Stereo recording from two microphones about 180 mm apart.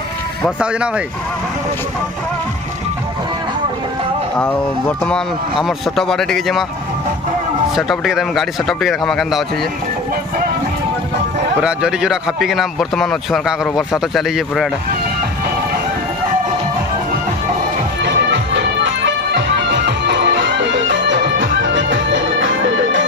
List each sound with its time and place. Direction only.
0.6 s a man's voice: 5° right (ahead or behind)
4.4 s a man's voice: 10° left (ahead or behind)
7.7 s a man's voice: centre (ahead or behind)
11.6 s a man's voice: 5° right (ahead or behind)
18.0 s music: 75° right (ahead or behind)